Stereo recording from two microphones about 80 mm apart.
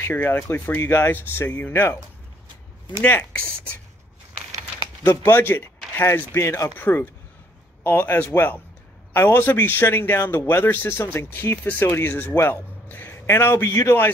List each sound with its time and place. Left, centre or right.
0.0 s speech: left
3.0 s speech: left
5.2 s speech: left
6.3 s a man's voice: left
6.8 s a man's voice: left
12.8 s a sound: left
13.6 s a man's voice: left